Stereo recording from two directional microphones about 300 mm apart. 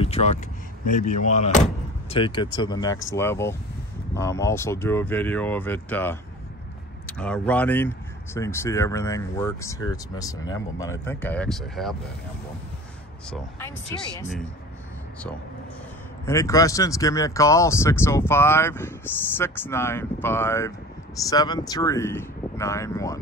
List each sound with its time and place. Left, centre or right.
0.0 s a sound: left
0.9 s speech: left; by 12.0 s centre
13.3 s speech: centre
16.3 s speech: centre